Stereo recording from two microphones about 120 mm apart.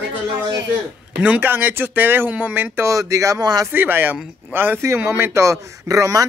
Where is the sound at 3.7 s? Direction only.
15° right (ahead or behind).